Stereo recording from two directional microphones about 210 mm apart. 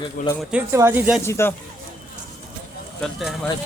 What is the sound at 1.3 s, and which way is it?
Speech, 10° left (ahead or behind).